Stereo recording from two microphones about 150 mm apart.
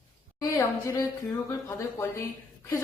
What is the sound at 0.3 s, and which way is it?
A man's voice, 20° left (ahead or behind).